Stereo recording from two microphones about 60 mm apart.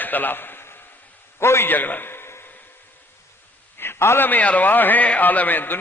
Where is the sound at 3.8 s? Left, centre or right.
Left.